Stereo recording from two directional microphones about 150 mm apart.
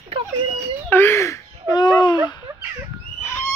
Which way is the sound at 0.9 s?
15° left (ahead or behind).